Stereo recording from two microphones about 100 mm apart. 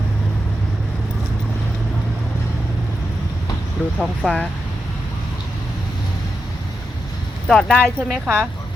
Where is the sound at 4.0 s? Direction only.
10° left (ahead or behind).